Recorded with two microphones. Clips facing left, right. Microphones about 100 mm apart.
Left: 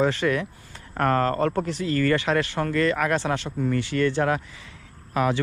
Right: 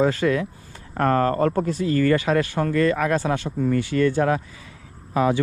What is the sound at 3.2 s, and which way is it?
Speech, 25° left (ahead or behind).